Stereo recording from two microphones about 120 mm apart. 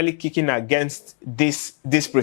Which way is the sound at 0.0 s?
15° left (ahead or behind).